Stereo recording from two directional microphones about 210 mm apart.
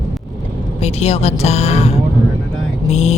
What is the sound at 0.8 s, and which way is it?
Speech, 30° left (ahead or behind).